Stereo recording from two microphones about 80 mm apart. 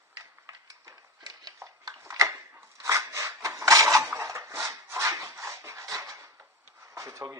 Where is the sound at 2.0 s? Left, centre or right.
Right.